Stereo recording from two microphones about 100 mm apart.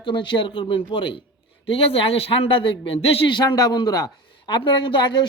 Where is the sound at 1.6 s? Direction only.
75° left (ahead or behind).